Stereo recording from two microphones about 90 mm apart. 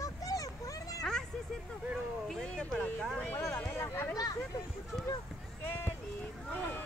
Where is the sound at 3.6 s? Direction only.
25° left (ahead or behind).